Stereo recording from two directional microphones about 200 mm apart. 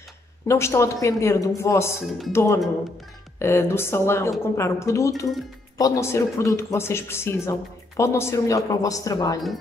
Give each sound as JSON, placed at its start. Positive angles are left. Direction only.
{"t": 0.5, "sound": "speech", "side_deg": 15}